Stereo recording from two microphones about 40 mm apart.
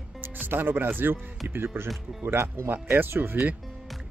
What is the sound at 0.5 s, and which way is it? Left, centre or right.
Speech, right.